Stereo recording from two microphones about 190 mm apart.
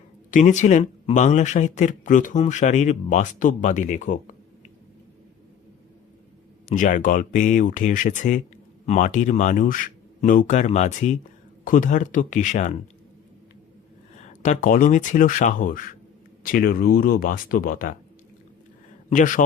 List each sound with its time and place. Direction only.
0.3 s speech: 40° left (ahead or behind)
6.7 s speech: 45° left (ahead or behind)
14.2 s speech: 40° left (ahead or behind)
19.1 s speech: 45° left (ahead or behind)